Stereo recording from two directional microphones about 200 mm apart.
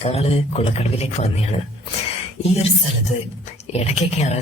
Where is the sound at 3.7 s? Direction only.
30° left (ahead or behind).